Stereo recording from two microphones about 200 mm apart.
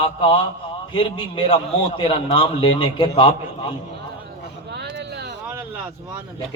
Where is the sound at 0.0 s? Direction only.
25° left (ahead or behind).